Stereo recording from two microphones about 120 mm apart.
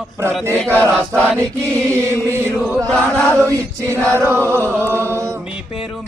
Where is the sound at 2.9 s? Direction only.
5° left (ahead or behind).